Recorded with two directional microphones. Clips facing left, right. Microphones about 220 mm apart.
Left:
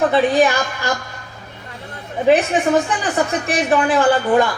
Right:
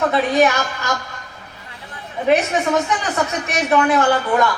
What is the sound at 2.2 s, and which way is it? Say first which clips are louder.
A woman's voice: left 2 dB; 30° left (ahead or behind).